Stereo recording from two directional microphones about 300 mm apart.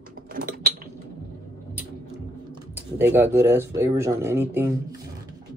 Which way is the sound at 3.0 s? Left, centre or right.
Centre.